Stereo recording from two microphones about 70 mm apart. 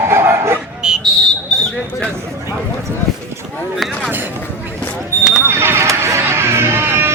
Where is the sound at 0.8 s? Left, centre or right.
Centre.